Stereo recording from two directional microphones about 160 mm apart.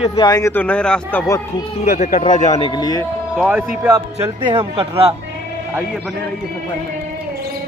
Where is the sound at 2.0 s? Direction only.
45° left (ahead or behind).